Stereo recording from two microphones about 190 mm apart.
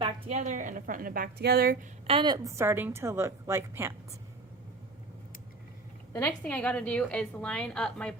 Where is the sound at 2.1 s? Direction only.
25° right (ahead or behind).